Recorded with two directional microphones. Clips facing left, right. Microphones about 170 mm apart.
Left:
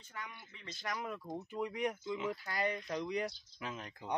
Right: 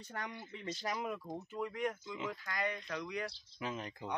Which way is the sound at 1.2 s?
20° left (ahead or behind).